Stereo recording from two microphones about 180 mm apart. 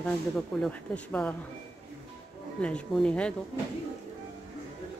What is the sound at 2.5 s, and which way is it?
Speech, 5° left (ahead or behind).